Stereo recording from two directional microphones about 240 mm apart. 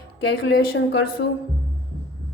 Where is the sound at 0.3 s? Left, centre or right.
Left.